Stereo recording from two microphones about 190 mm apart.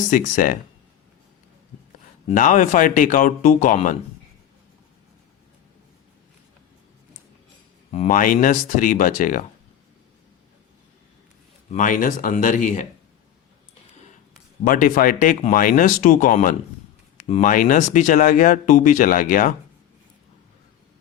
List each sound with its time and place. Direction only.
0.1 s speech: 45° left (ahead or behind)
2.3 s speech: 45° left (ahead or behind)
7.9 s speech: 35° left (ahead or behind)
8.1 s speech: 45° left (ahead or behind)
11.7 s speech: 45° left (ahead or behind)
14.6 s speech: 45° left (ahead or behind)